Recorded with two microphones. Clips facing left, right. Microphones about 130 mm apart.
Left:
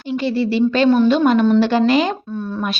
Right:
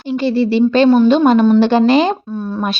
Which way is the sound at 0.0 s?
30° right (ahead or behind).